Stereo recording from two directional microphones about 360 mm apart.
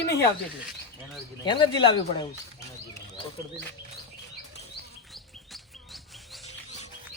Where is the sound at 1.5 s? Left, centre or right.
Centre.